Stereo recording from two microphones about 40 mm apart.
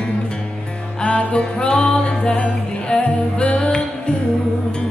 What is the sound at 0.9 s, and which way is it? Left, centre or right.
Music, left.